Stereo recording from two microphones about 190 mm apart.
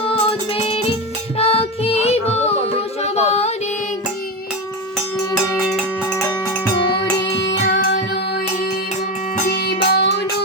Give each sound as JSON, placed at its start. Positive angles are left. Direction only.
{"t": 0.0, "sound": "music", "side_deg": 30}
{"t": 6.7, "sound": "music", "side_deg": 25}
{"t": 7.7, "sound": "music", "side_deg": 50}
{"t": 9.4, "sound": "music", "side_deg": 50}